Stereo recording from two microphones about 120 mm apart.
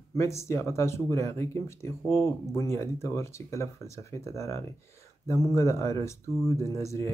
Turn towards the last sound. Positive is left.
turn(degrees=25)  # may be behind; listen again after turning